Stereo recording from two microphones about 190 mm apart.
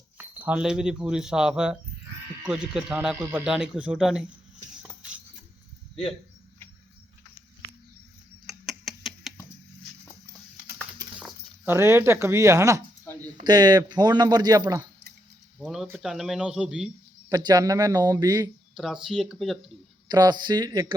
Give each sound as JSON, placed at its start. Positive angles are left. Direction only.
{"t": 0.2, "sound": "speech", "side_deg": -10}
{"t": 4.8, "sound": "music", "side_deg": -5}
{"t": 8.4, "sound": "a sound", "side_deg": 0}
{"t": 11.1, "sound": "speech", "side_deg": -10}
{"t": 15.5, "sound": "speech", "side_deg": 0}
{"t": 17.2, "sound": "speech", "side_deg": -20}
{"t": 18.7, "sound": "speech", "side_deg": 0}
{"t": 20.1, "sound": "speech", "side_deg": -20}